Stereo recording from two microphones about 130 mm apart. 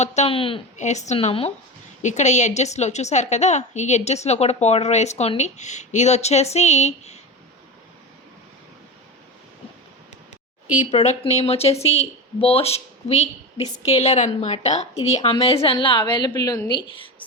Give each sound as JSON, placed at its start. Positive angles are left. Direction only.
{"t": 0.0, "sound": "a woman's voice", "side_deg": 60}
{"t": 0.3, "sound": "speech", "side_deg": 45}
{"t": 0.8, "sound": "a woman's voice", "side_deg": 65}
{"t": 2.0, "sound": "a woman's voice", "side_deg": 65}
{"t": 10.8, "sound": "a woman's voice", "side_deg": 60}